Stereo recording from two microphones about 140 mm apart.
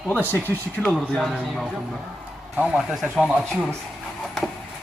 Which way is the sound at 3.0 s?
Centre (ahead or behind).